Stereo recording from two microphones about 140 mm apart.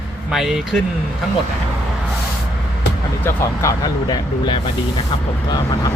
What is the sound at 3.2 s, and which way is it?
Speech, 20° left (ahead or behind).